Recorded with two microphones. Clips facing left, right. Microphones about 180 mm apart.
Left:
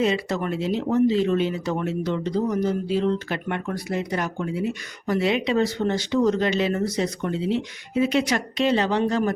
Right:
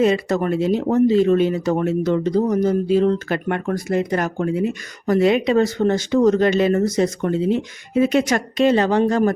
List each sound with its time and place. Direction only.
0.0 s speech: 45° right (ahead or behind)